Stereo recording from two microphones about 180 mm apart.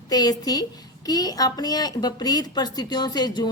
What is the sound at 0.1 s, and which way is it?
A woman's voice, 20° left (ahead or behind).